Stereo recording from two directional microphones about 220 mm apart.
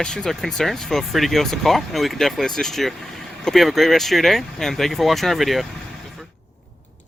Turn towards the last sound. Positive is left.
turn(degrees=0)  # may be behind; listen again after turning